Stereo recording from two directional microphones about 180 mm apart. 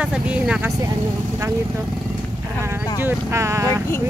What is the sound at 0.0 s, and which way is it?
Speech, 5° right (ahead or behind).